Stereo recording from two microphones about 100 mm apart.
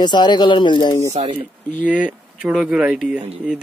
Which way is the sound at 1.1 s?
90° right.